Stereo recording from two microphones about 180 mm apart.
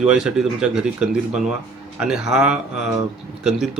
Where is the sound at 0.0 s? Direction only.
5° right (ahead or behind).